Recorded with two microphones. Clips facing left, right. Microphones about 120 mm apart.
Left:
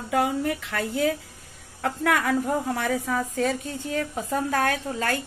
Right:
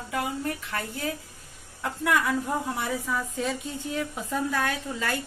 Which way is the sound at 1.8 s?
65° left (ahead or behind).